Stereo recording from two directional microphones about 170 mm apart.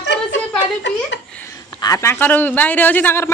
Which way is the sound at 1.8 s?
20° left (ahead or behind).